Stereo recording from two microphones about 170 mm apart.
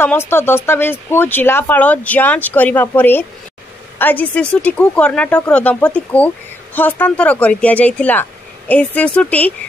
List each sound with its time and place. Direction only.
0.0 s speech: 15° left (ahead or behind)